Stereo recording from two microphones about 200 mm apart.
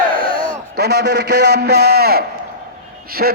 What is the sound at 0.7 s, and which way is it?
A man's voice, 55° right (ahead or behind).